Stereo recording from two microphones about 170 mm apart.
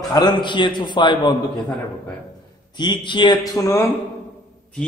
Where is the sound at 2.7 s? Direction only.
25° left (ahead or behind).